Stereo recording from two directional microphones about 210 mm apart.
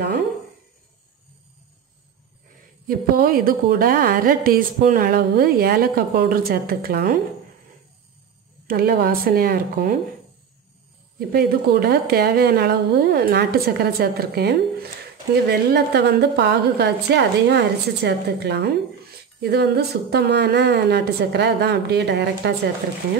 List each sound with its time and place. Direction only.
2.9 s a woman's voice: 45° right (ahead or behind)
8.6 s a woman's voice: 45° right (ahead or behind)
11.1 s a woman's voice: 50° right (ahead or behind)